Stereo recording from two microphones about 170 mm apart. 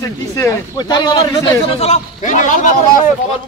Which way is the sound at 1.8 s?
45° left (ahead or behind).